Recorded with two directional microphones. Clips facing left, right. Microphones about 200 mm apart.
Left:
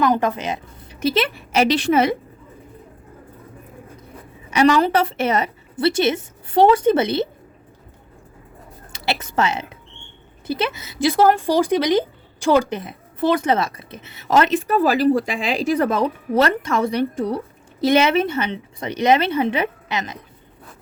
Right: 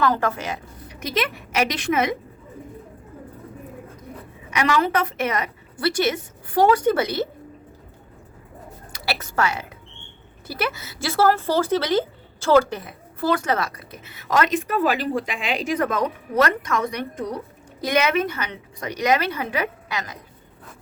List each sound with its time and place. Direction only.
0.0 s speech: 15° left (ahead or behind)
4.5 s speech: 30° left (ahead or behind)
8.9 s a woman's voice: 20° left (ahead or behind)